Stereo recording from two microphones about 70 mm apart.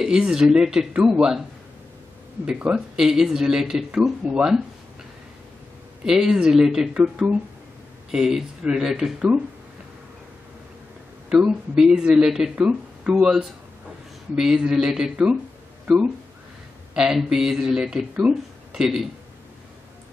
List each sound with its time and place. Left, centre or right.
0.0 s speech: centre
2.4 s speech: centre
6.0 s speech: centre
8.1 s speech: centre
11.2 s speech: centre
12.5 s speech: centre
13.1 s speech: centre
16.9 s speech: centre